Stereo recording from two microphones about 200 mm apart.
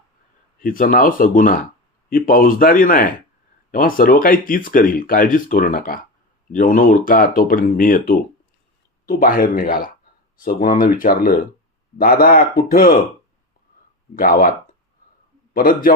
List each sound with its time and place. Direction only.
0.6 s speech: 45° left (ahead or behind)
14.2 s speech: 45° left (ahead or behind)
15.5 s speech: 45° left (ahead or behind)